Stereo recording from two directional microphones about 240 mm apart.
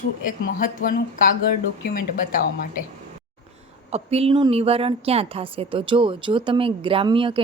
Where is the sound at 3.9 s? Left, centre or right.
Right.